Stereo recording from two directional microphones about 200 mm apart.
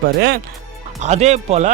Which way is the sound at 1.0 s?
35° right (ahead or behind).